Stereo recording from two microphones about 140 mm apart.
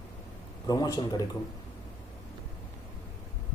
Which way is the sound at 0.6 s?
30° left (ahead or behind).